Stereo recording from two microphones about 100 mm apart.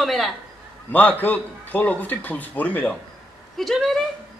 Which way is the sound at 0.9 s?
15° left (ahead or behind).